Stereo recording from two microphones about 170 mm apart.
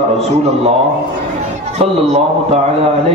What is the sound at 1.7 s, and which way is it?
Speech, 40° right (ahead or behind).